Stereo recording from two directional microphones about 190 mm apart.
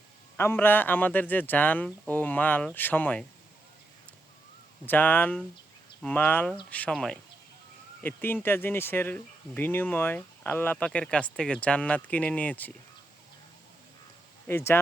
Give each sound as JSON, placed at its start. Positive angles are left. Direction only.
{"t": 0.3, "sound": "speech", "side_deg": 10}
{"t": 4.9, "sound": "speech", "side_deg": 10}
{"t": 14.4, "sound": "speech", "side_deg": 10}